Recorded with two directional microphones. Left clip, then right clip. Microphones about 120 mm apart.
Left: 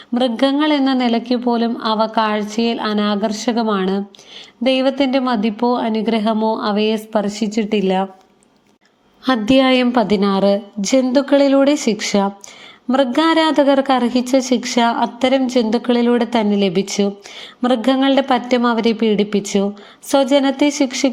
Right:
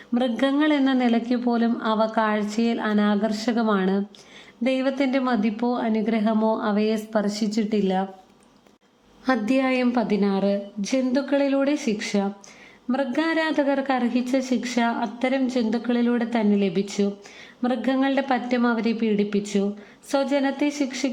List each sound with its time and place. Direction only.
0.1 s speech: 10° left (ahead or behind)
9.2 s a woman's voice: 30° left (ahead or behind)